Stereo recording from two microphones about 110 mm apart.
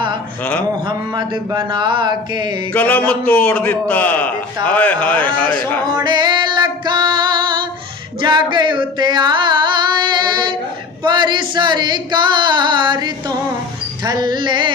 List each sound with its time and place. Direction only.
0.9 s singing: 40° right (ahead or behind)
2.7 s a man's voice: 15° left (ahead or behind)
5.9 s music: 40° right (ahead or behind)
8.2 s singing: 45° right (ahead or behind)